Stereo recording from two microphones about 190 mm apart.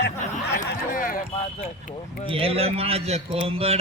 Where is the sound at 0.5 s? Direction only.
50° left (ahead or behind).